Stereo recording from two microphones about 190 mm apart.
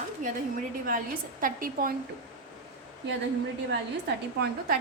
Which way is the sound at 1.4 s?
45° right (ahead or behind).